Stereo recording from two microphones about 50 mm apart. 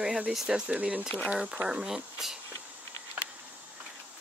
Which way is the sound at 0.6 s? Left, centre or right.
Right.